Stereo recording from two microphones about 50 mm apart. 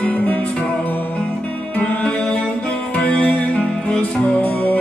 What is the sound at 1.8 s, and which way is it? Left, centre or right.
Music, left.